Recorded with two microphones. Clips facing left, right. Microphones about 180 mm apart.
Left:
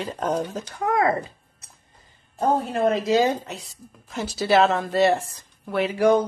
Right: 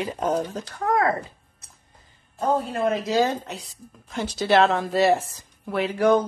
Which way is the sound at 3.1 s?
25° left (ahead or behind).